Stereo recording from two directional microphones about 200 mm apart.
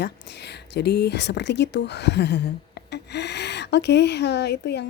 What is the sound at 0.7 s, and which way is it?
Speech, 55° left (ahead or behind).